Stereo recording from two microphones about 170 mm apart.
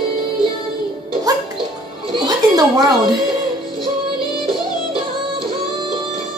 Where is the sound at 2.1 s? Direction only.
25° right (ahead or behind).